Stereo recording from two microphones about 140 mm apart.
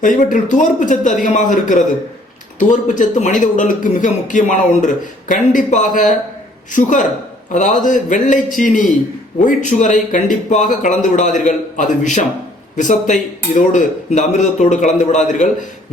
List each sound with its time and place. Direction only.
0.0 s a man's voice: 65° left (ahead or behind)
7.5 s a man's voice: 65° left (ahead or behind)